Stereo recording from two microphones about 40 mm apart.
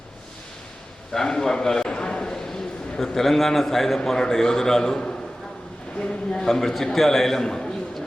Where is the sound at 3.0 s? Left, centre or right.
Centre.